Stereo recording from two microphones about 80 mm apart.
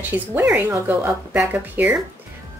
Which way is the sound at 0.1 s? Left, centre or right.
Right.